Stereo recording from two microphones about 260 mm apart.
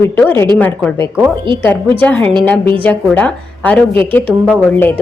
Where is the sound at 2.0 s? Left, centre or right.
Centre.